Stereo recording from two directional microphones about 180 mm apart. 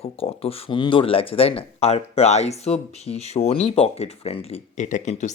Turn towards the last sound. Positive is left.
turn(degrees=40)  # may be behind; listen again after turning